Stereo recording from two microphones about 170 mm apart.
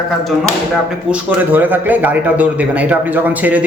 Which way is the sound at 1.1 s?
10° right (ahead or behind).